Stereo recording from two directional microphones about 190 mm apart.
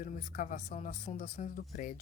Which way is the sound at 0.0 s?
45° left (ahead or behind).